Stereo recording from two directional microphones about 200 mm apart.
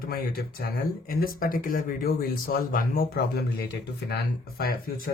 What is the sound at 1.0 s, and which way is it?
Speech, 45° left (ahead or behind).